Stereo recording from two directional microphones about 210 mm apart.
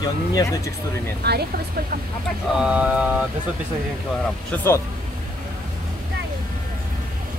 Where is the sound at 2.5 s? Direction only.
5° right (ahead or behind).